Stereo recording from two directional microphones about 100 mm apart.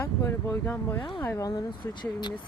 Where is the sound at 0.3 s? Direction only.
25° left (ahead or behind).